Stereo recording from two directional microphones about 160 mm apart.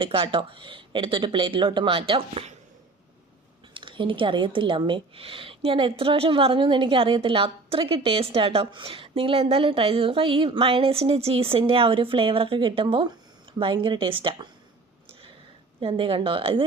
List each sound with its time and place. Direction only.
0.0 s speech: 30° right (ahead or behind)
3.8 s speech: 30° right (ahead or behind)
15.8 s speech: 35° right (ahead or behind)